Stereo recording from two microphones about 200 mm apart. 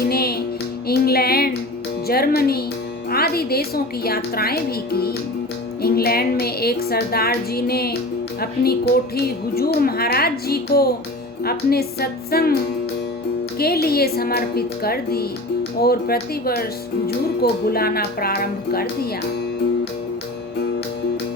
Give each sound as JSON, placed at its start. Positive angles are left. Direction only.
{"t": 0.1, "sound": "music", "side_deg": 50}
{"t": 3.1, "sound": "speech", "side_deg": 50}
{"t": 13.6, "sound": "speech", "side_deg": 50}